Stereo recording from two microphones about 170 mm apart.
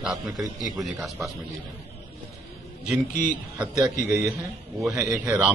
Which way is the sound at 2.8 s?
5° right (ahead or behind).